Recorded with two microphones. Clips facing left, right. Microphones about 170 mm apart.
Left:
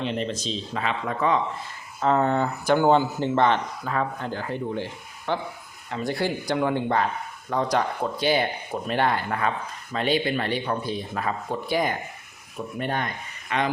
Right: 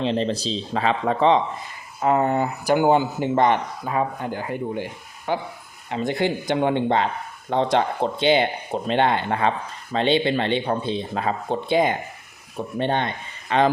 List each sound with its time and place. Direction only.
0.0 s speech: 30° right (ahead or behind)
2.0 s speech: 10° right (ahead or behind); by 13.7 s 30° right (ahead or behind)